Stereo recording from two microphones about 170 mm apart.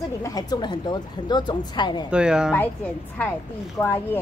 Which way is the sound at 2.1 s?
5° right (ahead or behind).